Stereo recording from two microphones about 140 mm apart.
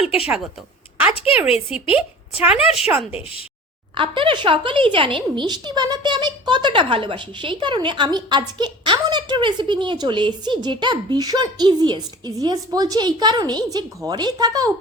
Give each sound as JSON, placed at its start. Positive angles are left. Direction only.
{"t": 1.1, "sound": "a woman's voice", "side_deg": 45}
{"t": 2.4, "sound": "a woman's voice", "side_deg": -5}
{"t": 3.9, "sound": "speech", "side_deg": -35}